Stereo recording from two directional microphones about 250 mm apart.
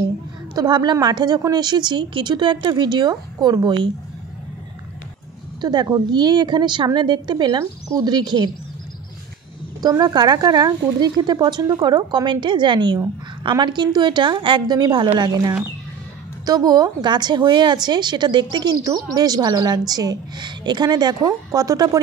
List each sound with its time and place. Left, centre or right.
0.6 s a woman's voice: centre
5.6 s a woman's voice: centre
9.8 s a woman's voice: centre